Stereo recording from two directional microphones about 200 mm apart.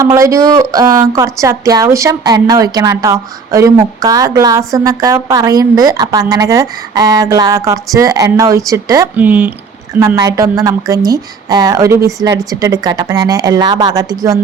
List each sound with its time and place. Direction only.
0.0 s speech: 15° right (ahead or behind)